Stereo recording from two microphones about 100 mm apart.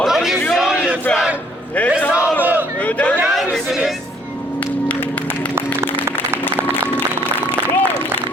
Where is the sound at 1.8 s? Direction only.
15° left (ahead or behind).